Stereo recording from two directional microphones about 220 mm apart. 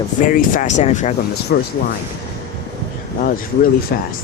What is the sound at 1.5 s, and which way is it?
Speech, 45° left (ahead or behind).